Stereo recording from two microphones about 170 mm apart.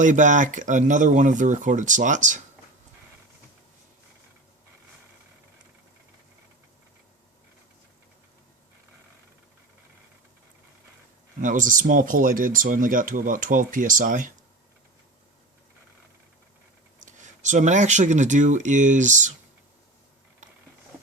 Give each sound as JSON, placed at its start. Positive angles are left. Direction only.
{"t": 0.0, "sound": "speech", "side_deg": -45}
{"t": 11.3, "sound": "speech", "side_deg": -50}
{"t": 17.1, "sound": "speech", "side_deg": -45}